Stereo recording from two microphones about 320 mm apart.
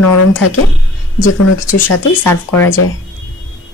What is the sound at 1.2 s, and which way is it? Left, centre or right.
Speech, left.